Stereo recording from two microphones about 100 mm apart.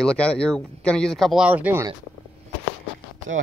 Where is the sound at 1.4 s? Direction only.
15° right (ahead or behind).